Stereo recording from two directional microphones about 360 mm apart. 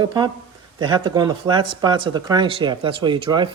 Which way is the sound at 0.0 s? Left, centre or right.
Centre.